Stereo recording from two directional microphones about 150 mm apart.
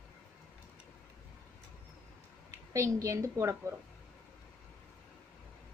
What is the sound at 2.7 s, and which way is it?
A woman's voice, 20° right (ahead or behind).